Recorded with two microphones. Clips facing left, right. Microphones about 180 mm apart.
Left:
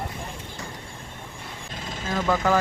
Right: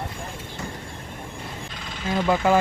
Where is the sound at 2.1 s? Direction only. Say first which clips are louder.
Right 3 dB; 20° right (ahead or behind).